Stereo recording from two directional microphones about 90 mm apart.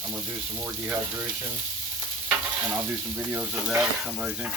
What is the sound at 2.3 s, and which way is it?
Stir, 25° right (ahead or behind).